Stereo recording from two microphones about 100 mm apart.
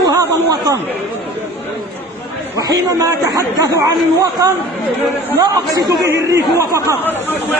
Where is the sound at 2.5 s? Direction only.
35° right (ahead or behind).